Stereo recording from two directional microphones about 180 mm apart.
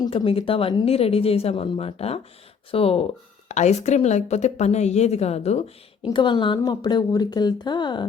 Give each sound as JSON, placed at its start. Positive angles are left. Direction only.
{"t": 0.0, "sound": "speech", "side_deg": 30}